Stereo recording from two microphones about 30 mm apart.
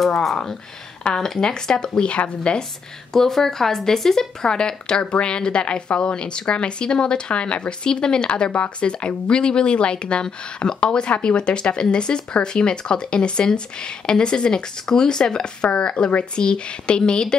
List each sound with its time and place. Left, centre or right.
1.1 s speech: left
2.0 s a woman's voice: left
3.1 s speech: centre
4.5 s a woman's voice: left
8.3 s a woman's voice: left